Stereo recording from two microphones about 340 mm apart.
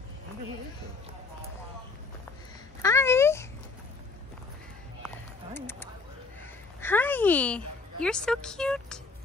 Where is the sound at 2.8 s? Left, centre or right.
Centre.